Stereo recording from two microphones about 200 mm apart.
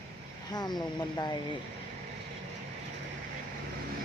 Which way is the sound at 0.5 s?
20° left (ahead or behind).